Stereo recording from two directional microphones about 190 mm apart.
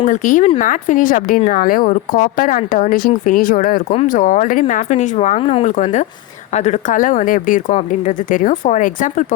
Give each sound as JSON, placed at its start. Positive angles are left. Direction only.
{"t": 0.0, "sound": "a woman's voice", "side_deg": 40}